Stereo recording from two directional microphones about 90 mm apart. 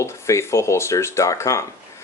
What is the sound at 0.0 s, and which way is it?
Speech, 30° left (ahead or behind).